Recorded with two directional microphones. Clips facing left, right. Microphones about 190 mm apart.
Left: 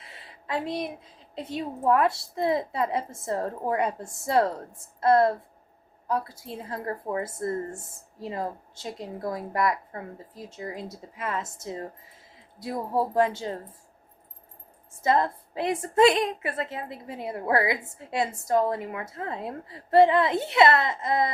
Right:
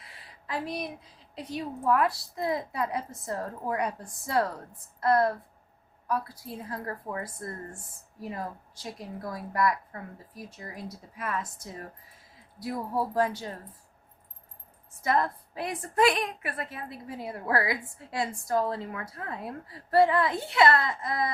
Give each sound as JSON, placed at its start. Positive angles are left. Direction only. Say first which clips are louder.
{"t": 0.0, "sound": "a sound", "louder": "left 3 dB", "side_deg": 25}
{"t": 1.4, "sound": "a woman's voice", "louder": "left 3 dB", "side_deg": 25}
{"t": 15.0, "sound": "a woman's voice", "louder": "left 3 dB", "side_deg": 25}